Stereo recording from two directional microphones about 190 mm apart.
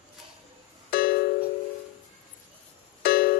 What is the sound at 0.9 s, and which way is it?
Music, 55° left (ahead or behind).